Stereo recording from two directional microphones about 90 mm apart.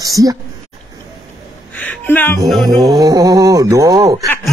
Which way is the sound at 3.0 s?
40° right (ahead or behind).